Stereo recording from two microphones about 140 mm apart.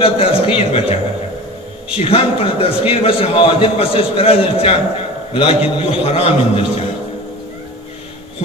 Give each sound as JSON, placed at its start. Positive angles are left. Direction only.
{"t": 0.0, "sound": "a man's voice", "side_deg": 40}
{"t": 2.0, "sound": "a man's voice", "side_deg": 40}